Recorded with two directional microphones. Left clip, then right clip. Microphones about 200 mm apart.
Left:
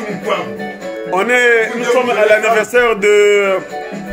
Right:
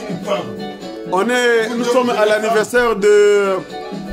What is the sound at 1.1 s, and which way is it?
A man's voice, 15° right (ahead or behind).